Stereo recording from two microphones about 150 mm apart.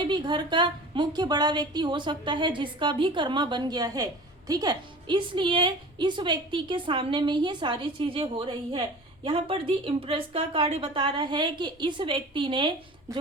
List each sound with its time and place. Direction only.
0.0 s a woman's voice: 30° right (ahead or behind)